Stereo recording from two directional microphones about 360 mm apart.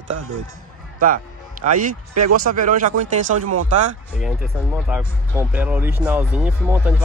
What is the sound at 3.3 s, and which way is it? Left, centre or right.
Speech, right.